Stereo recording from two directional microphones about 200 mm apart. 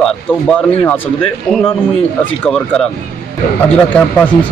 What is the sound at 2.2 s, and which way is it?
Speech, 5° left (ahead or behind).